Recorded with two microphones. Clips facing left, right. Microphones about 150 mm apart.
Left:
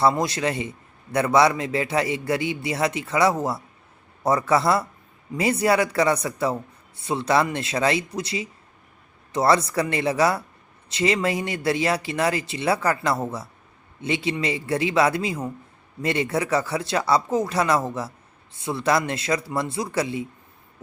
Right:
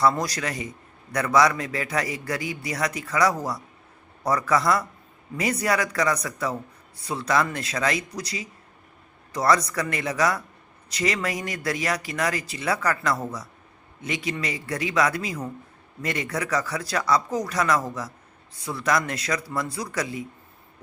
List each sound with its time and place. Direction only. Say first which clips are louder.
0.1 s speech: left 4 dB; 25° left (ahead or behind)